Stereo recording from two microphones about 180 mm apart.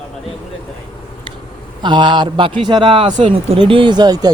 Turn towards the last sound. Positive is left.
turn(degrees=-20)  # may be behind; listen again after turning